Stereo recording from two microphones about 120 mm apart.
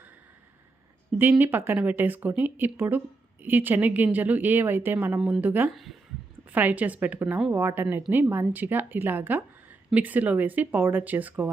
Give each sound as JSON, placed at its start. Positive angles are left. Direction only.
{"t": 1.2, "sound": "a woman's voice", "side_deg": -15}
{"t": 5.7, "sound": "a woman's voice", "side_deg": 0}
{"t": 6.5, "sound": "a woman's voice", "side_deg": -15}